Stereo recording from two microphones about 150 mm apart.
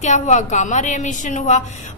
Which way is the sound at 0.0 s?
55° left (ahead or behind).